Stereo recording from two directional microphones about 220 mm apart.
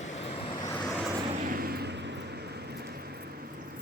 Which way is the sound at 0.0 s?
30° left (ahead or behind).